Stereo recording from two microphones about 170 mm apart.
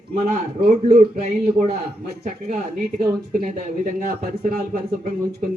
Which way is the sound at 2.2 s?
45° right (ahead or behind).